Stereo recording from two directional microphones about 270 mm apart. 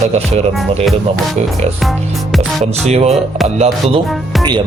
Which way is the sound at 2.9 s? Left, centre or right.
Right.